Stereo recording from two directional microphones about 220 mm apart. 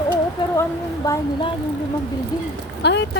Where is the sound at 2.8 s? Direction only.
50° left (ahead or behind).